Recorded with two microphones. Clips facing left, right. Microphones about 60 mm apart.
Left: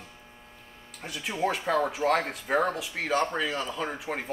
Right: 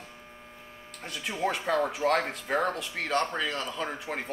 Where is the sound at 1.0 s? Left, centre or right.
Centre.